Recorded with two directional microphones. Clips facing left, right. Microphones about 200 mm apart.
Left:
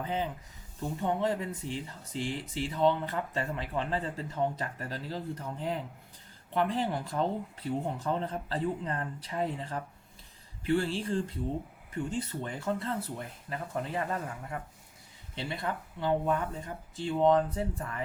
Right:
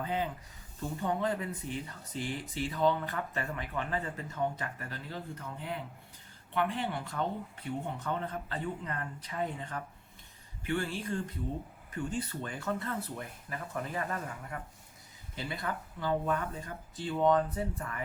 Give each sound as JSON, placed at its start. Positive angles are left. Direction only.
{"t": 0.0, "sound": "speech", "side_deg": 20}